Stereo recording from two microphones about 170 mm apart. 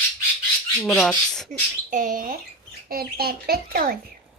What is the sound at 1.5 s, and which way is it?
Speech, 50° right (ahead or behind).